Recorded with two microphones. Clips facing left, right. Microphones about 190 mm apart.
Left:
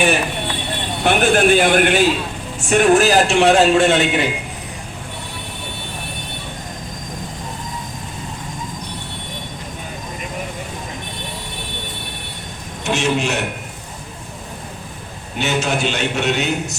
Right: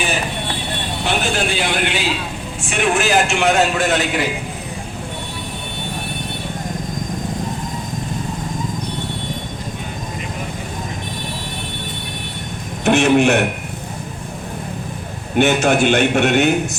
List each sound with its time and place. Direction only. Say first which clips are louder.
1.0 s a man's voice: left 7 dB; 55° left (ahead or behind); by 4.3 s 25° left (ahead or behind)
12.8 s a man's voice: right 7 dB; 60° right (ahead or behind)
15.4 s a man's voice: right 6 dB; 55° right (ahead or behind)